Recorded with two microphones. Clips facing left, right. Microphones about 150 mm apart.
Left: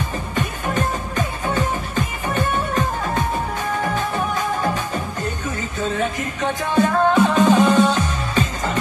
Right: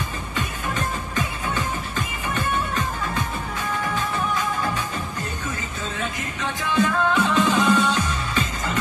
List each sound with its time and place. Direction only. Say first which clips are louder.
0.4 s music: left 5 dB; 40° left (ahead or behind)